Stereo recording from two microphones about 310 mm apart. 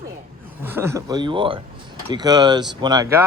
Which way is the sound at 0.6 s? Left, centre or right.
Centre.